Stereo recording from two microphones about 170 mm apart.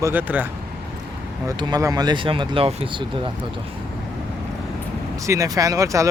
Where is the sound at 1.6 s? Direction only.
20° right (ahead or behind).